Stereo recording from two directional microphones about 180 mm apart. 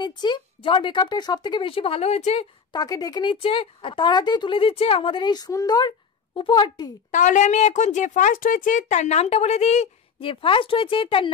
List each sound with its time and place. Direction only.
0.0 s speech: 25° left (ahead or behind)
2.7 s speech: 20° left (ahead or behind)
7.1 s a woman's voice: 45° left (ahead or behind); by 11.3 s 30° left (ahead or behind)